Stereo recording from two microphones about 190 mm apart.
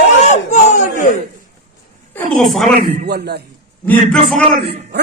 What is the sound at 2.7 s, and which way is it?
Speech, 55° right (ahead or behind).